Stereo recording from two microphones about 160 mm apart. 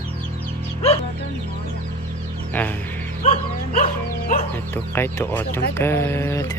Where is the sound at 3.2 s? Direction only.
40° left (ahead or behind).